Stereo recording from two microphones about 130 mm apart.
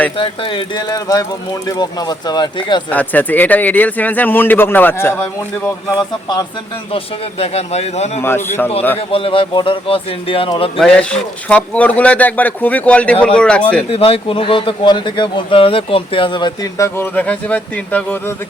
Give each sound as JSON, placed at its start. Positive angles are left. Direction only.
{"t": 0.2, "sound": "speech", "side_deg": 40}
{"t": 2.9, "sound": "speech", "side_deg": 10}
{"t": 6.0, "sound": "speech", "side_deg": 30}
{"t": 6.9, "sound": "speech", "side_deg": 50}
{"t": 8.2, "sound": "speech", "side_deg": 15}
{"t": 9.0, "sound": "speech", "side_deg": 45}
{"t": 10.8, "sound": "speech", "side_deg": 5}
{"t": 13.9, "sound": "speech", "side_deg": 50}
{"t": 16.7, "sound": "speech", "side_deg": 25}
{"t": 17.2, "sound": "speech", "side_deg": 10}